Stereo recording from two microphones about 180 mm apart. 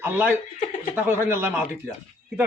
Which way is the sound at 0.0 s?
10° right (ahead or behind).